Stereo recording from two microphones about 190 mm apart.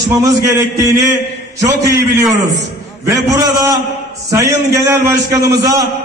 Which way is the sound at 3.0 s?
20° right (ahead or behind).